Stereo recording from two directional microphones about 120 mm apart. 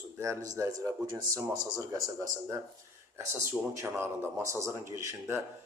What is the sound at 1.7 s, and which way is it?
Speech, 25° right (ahead or behind).